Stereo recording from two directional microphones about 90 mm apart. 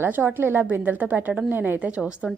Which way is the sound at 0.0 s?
20° right (ahead or behind).